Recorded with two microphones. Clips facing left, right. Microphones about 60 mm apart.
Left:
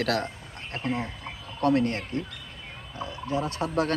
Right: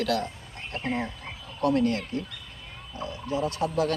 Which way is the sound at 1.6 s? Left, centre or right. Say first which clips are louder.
Even; left.